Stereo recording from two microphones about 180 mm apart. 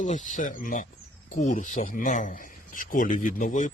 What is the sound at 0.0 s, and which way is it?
Speech, 45° left (ahead or behind).